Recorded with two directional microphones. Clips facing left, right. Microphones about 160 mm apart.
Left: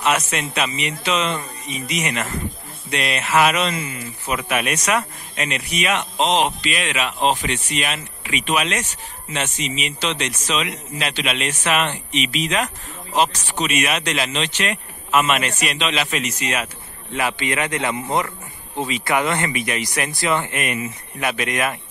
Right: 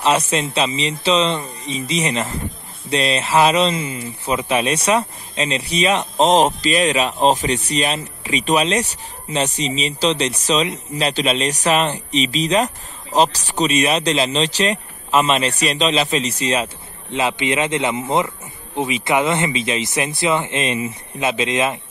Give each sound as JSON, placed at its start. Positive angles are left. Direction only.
{"t": 0.3, "sound": "speech", "side_deg": -30}